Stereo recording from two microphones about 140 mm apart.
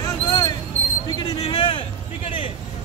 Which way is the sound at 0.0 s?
30° left (ahead or behind).